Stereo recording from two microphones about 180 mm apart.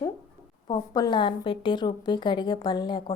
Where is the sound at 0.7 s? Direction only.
25° left (ahead or behind).